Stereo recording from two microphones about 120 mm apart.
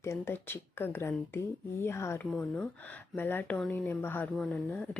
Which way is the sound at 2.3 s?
10° left (ahead or behind).